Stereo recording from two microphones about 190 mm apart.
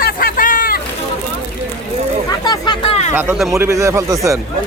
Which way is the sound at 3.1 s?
5° right (ahead or behind).